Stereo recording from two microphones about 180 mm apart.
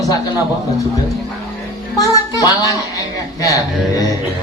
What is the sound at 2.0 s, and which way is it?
A man's voice, 20° left (ahead or behind).